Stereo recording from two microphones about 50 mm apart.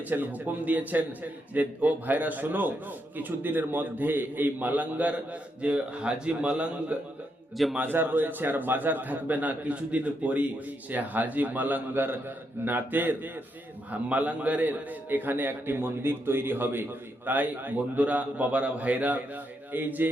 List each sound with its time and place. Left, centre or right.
0.0 s a man's voice: right
7.8 s a man's voice: right